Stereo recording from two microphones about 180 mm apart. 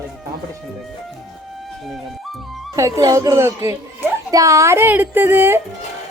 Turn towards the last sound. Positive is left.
turn(degrees=-10)  # may be behind; listen again after turning